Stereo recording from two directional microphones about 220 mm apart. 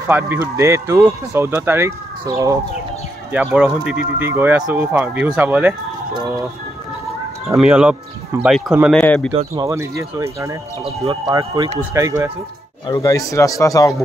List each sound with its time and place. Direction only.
0.1 s speech: 10° right (ahead or behind)
7.5 s speech: 5° right (ahead or behind)
9.5 s speech: 15° right (ahead or behind)
12.8 s speech: 15° left (ahead or behind)